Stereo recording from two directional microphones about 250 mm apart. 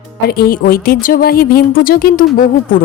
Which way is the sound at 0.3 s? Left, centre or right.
Left.